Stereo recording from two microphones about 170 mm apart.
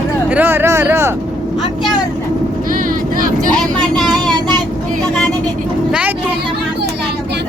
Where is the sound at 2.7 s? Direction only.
55° right (ahead or behind).